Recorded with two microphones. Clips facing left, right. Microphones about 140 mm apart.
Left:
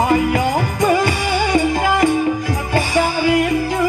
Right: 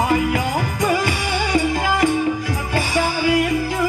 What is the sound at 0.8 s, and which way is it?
Music, 30° left (ahead or behind).